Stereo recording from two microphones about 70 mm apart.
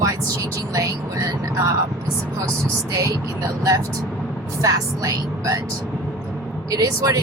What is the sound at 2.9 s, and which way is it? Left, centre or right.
Speech, right.